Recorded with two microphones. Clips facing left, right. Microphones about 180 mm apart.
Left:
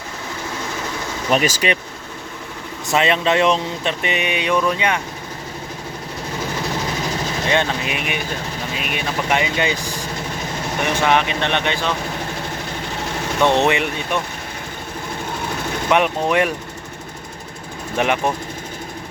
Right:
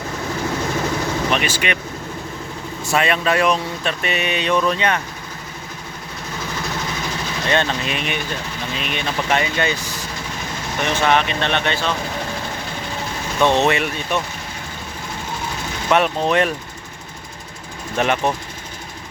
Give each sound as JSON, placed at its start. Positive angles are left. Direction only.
{"t": 1.3, "sound": "speech", "side_deg": 40}
{"t": 2.8, "sound": "speech", "side_deg": 20}
{"t": 7.4, "sound": "speech", "side_deg": 15}
{"t": 13.4, "sound": "speech", "side_deg": 15}
{"t": 15.9, "sound": "speech", "side_deg": 15}
{"t": 17.9, "sound": "speech", "side_deg": 15}